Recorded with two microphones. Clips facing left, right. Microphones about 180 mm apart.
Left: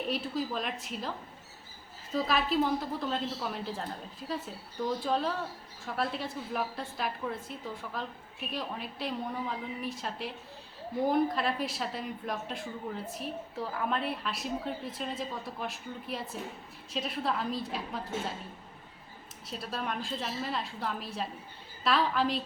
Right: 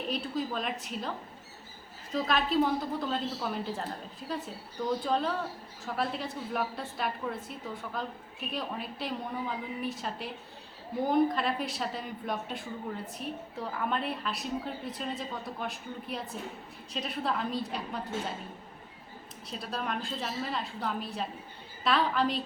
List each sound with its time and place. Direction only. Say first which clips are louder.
0.1 s a woman's voice: right 2 dB; centre (ahead or behind)
2.1 s a woman's voice: right 1 dB; 5° left (ahead or behind)
19.5 s a woman's voice: right 1 dB; centre (ahead or behind)